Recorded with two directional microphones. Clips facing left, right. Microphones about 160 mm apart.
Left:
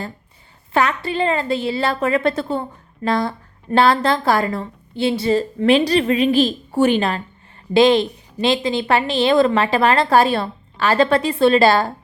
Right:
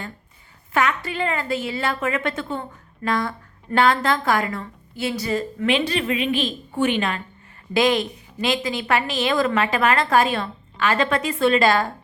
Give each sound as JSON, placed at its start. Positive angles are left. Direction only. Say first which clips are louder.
{"t": 0.7, "sound": "a woman's voice", "louder": "left 3 dB", "side_deg": 30}